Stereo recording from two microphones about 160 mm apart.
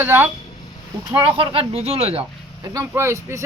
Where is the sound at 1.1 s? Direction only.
30° right (ahead or behind).